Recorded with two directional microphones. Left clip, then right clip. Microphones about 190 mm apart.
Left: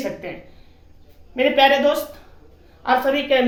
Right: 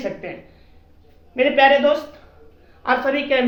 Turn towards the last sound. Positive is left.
turn(degrees=25)  # may be behind; listen again after turning